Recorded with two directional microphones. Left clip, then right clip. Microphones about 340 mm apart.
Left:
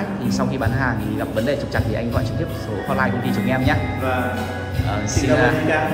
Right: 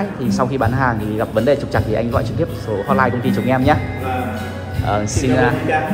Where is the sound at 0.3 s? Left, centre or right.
Centre.